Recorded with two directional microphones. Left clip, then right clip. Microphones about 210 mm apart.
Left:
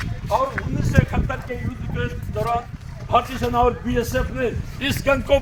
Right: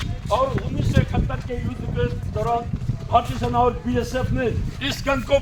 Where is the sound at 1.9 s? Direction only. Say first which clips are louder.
Right 1 dB; 35° left (ahead or behind).